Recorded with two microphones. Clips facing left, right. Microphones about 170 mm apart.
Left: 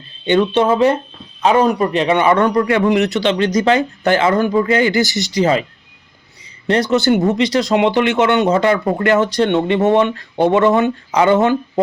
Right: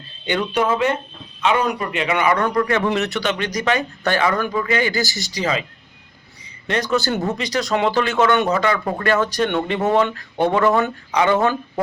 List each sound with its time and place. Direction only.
0.3 s a man's voice: 25° left (ahead or behind)
5.0 s a man's voice: 20° left (ahead or behind)
5.4 s speech: 35° left (ahead or behind)
6.7 s a man's voice: 25° left (ahead or behind)